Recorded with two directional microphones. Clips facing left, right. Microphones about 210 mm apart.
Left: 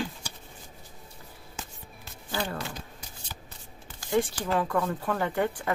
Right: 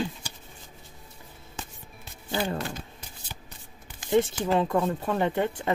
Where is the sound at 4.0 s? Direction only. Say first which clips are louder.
Right 3 dB; 25° right (ahead or behind).